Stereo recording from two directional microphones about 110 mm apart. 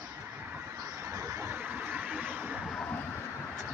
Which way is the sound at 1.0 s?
35° right (ahead or behind).